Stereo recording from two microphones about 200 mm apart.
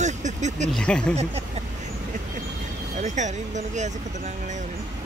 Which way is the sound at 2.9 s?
35° right (ahead or behind).